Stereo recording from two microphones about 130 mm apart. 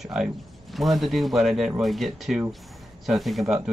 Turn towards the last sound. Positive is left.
turn(degrees=-5)  # may be behind; listen again after turning